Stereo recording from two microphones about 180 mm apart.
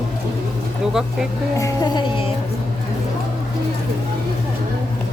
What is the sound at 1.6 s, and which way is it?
Speech, 20° left (ahead or behind).